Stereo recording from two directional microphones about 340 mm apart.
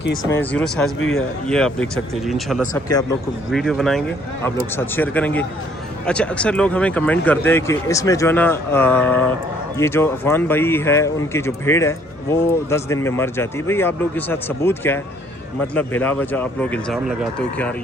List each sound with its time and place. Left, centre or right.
0.3 s speech: centre
0.9 s a man's voice: left
1.5 s speech: centre